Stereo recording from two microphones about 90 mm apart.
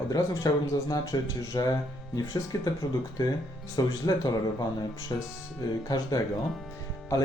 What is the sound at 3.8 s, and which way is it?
Speech, 45° left (ahead or behind).